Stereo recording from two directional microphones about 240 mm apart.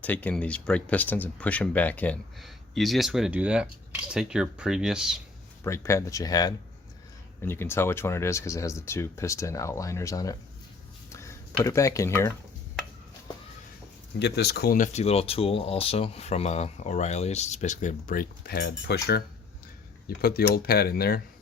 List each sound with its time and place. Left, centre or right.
0.0 s speech: centre
5.6 s speech: centre
11.1 s a sound: centre
14.2 s speech: left
20.1 s speech: left